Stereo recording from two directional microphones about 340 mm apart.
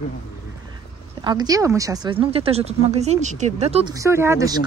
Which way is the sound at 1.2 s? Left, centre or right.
Centre.